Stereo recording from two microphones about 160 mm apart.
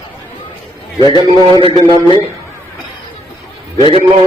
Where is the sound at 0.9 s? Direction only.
30° right (ahead or behind).